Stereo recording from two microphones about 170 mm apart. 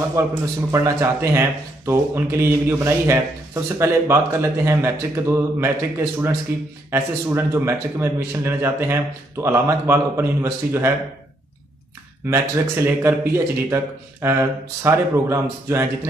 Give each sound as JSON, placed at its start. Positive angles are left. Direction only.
{"t": 0.2, "sound": "a man's voice", "side_deg": -15}
{"t": 12.3, "sound": "a man's voice", "side_deg": -15}